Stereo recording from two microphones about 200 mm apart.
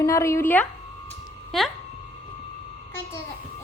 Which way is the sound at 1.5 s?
Centre (ahead or behind).